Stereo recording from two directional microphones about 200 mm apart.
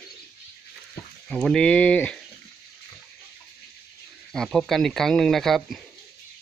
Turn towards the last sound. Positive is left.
turn(degrees=0)  # may be behind; listen again after turning